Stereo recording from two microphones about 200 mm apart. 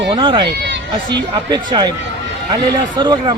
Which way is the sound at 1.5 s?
25° right (ahead or behind).